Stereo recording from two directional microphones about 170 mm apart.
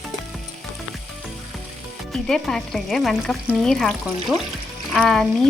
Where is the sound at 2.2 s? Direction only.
5° left (ahead or behind).